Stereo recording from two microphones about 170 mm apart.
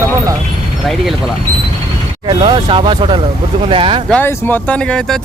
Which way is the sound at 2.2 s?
30° right (ahead or behind).